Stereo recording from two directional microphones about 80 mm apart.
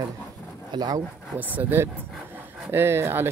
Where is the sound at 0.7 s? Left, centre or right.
Right.